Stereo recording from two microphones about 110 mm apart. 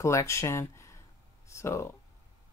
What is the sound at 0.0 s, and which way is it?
Speech, 25° left (ahead or behind).